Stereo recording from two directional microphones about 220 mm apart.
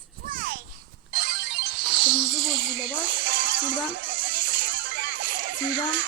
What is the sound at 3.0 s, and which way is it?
Music, 55° right (ahead or behind).